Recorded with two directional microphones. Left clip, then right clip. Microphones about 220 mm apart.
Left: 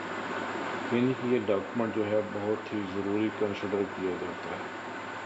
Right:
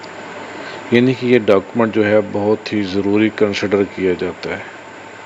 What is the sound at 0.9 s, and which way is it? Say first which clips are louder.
Speech: right 16 dB; 35° right (ahead or behind).